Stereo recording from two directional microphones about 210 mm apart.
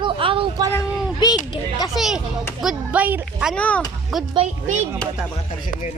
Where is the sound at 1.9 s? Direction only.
Centre (ahead or behind).